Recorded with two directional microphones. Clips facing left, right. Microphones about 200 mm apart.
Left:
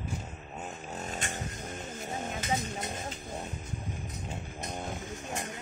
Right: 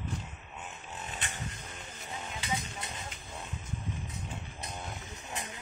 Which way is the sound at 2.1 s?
45° left (ahead or behind).